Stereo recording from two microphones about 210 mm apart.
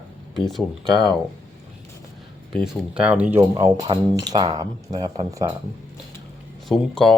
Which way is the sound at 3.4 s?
15° right (ahead or behind).